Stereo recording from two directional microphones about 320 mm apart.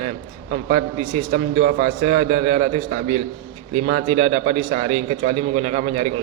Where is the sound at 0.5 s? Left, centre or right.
Right.